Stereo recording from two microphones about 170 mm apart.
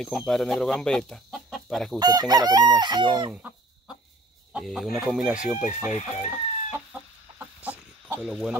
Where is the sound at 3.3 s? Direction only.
5° right (ahead or behind).